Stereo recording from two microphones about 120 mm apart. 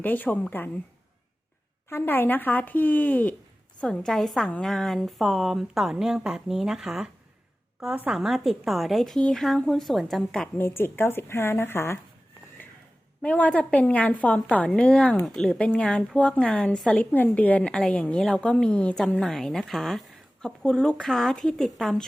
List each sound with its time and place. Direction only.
0.0 s a woman's voice: 15° left (ahead or behind)
1.9 s a woman's voice: 15° left (ahead or behind)
10.6 s a woman's voice: 20° left (ahead or behind)
13.2 s a woman's voice: 10° left (ahead or behind)